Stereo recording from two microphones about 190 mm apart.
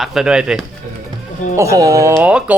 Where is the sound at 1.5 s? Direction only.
15° right (ahead or behind).